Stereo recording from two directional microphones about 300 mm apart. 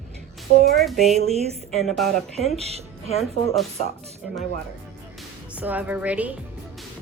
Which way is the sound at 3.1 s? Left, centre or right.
Left.